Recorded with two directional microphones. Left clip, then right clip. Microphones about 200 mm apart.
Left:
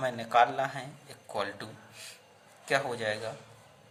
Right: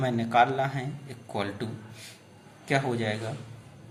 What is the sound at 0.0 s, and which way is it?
A man's voice, 25° left (ahead or behind).